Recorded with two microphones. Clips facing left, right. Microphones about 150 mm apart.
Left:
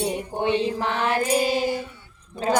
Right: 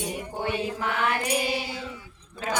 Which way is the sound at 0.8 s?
35° left (ahead or behind).